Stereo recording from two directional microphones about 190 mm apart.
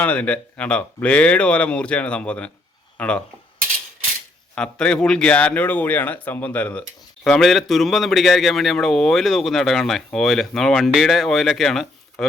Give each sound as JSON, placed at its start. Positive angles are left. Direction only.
{"t": 0.0, "sound": "a man's voice", "side_deg": 5}
{"t": 4.5, "sound": "a man's voice", "side_deg": 5}